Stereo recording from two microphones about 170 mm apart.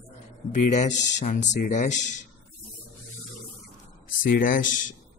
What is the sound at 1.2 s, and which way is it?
Speech, 45° left (ahead or behind).